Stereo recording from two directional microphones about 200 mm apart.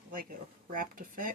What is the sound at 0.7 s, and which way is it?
Speech, 45° right (ahead or behind).